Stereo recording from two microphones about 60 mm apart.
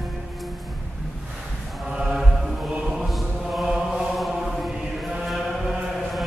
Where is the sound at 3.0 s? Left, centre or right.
Centre.